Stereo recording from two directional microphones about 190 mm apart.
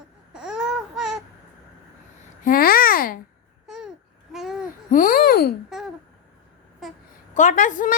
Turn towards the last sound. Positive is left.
turn(degrees=45)  # may be behind; listen again after turning